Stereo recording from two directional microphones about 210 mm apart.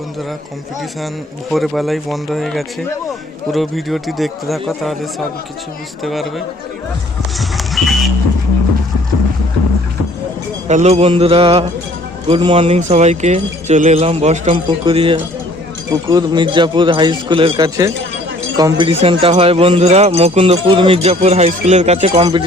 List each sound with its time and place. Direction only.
1.5 s speech: centre (ahead or behind)
6.0 s speech: centre (ahead or behind)
7.3 s a sound: centre (ahead or behind)
10.7 s speech: 30° right (ahead or behind)